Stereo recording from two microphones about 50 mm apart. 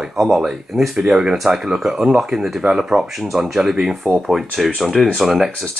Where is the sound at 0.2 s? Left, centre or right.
Centre.